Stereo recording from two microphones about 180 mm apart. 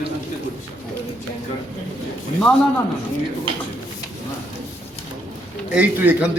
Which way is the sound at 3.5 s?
30° right (ahead or behind).